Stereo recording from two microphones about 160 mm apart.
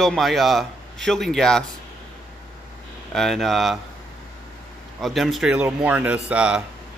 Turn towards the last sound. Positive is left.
turn(degrees=-5)  # may be behind; listen again after turning